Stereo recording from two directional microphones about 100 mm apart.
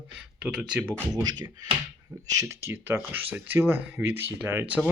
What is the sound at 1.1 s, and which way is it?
Speech, 40° right (ahead or behind).